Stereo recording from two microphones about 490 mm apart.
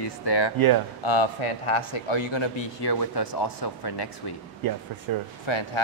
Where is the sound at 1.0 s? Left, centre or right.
Left.